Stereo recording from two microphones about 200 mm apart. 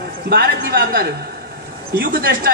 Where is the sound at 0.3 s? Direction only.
50° right (ahead or behind).